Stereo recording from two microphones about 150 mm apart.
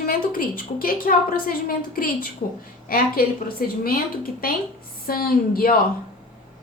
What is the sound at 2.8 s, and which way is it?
A woman's voice, 75° left (ahead or behind).